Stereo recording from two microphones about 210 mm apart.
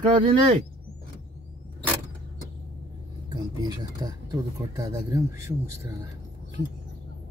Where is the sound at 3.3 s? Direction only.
15° right (ahead or behind).